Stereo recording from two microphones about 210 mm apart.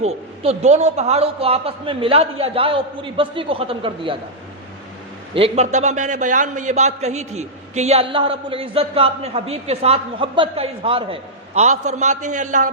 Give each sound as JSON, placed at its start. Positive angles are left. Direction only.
{"t": 0.0, "sound": "a man's voice", "side_deg": -30}
{"t": 5.3, "sound": "a man's voice", "side_deg": -30}